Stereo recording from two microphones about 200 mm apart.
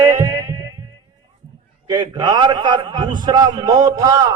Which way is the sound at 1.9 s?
20° right (ahead or behind).